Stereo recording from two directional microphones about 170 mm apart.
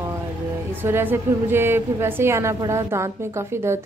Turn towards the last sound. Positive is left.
turn(degrees=-15)  # may be behind; listen again after turning